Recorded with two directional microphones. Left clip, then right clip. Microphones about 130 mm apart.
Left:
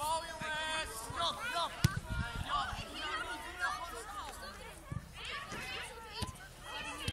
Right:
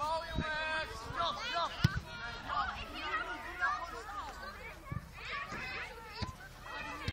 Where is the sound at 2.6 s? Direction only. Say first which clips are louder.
Right 1 dB; 60° left (ahead or behind).